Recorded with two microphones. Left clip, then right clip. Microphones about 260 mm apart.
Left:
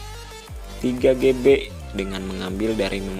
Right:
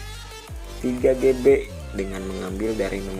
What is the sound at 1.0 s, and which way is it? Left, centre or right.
Speech, left.